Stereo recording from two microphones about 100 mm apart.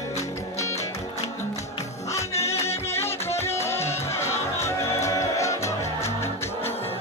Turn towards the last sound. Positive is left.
turn(degrees=30)  # may be behind; listen again after turning